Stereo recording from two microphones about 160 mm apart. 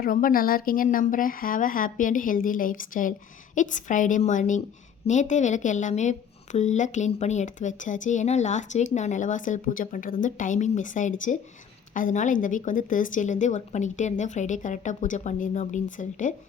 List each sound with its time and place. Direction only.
0.0 s a woman's voice: 60° left (ahead or behind)